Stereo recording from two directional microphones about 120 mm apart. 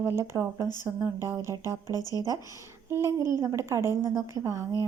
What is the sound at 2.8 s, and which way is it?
Speech, 20° right (ahead or behind).